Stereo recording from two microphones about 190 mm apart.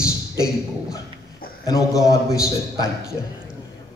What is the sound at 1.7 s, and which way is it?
Speech, 15° left (ahead or behind).